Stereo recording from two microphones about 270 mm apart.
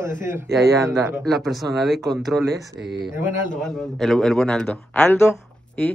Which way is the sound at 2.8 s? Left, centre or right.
Right.